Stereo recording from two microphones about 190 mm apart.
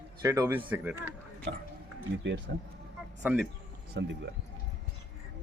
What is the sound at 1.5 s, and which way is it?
Speech, 70° right (ahead or behind).